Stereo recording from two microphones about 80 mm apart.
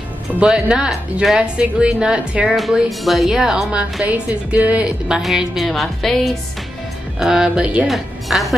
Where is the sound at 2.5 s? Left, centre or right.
Centre.